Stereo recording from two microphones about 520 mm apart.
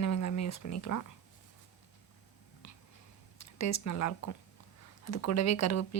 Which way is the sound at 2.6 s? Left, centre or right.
Left.